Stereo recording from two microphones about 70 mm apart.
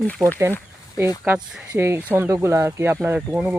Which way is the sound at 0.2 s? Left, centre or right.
Right.